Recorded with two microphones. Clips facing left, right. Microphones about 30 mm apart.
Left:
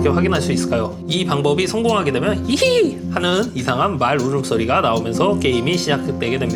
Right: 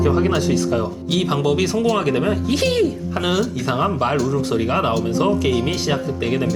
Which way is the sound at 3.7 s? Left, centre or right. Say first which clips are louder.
Left 3 dB; left.